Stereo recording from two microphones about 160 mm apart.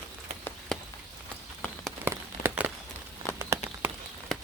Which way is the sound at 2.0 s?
15° right (ahead or behind).